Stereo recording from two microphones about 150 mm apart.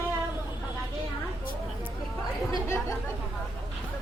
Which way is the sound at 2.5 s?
20° left (ahead or behind).